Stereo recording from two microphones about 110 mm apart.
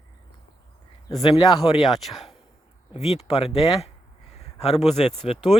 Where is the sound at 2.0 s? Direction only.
Centre (ahead or behind).